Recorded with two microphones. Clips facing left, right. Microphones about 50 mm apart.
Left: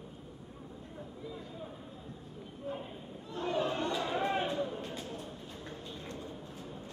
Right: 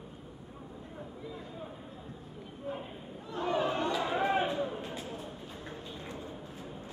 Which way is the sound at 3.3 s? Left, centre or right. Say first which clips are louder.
Right 2 dB; centre.